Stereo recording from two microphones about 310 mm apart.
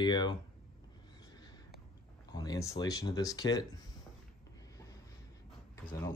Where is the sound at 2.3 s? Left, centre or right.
Centre.